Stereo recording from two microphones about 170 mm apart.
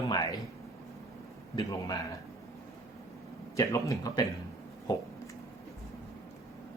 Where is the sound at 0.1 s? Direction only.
20° left (ahead or behind).